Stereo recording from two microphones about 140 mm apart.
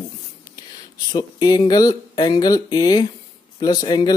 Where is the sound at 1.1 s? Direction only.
30° left (ahead or behind).